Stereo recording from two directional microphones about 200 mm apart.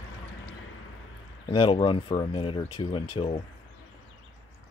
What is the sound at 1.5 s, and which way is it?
Speech, 25° left (ahead or behind).